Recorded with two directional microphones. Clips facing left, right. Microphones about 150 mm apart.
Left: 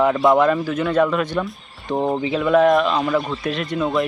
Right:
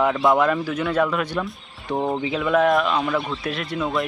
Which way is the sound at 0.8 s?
5° right (ahead or behind).